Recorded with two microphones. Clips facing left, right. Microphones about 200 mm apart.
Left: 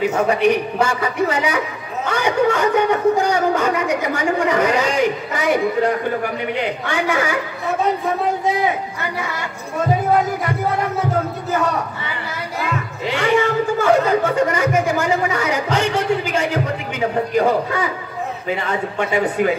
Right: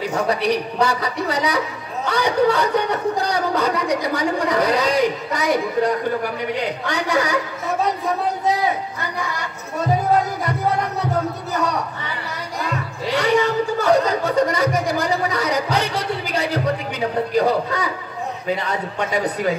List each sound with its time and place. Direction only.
0.1 s speech: 35° right (ahead or behind)
12.5 s a sound: 40° right (ahead or behind)
17.4 s speech: 40° right (ahead or behind)